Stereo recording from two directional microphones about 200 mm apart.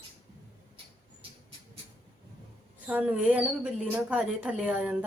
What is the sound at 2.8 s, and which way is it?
Speech, 5° right (ahead or behind).